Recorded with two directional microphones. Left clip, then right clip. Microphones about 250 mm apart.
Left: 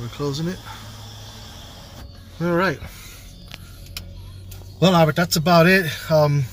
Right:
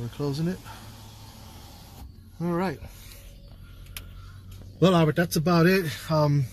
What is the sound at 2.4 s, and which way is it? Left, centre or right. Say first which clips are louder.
Speech: left 9 dB; centre.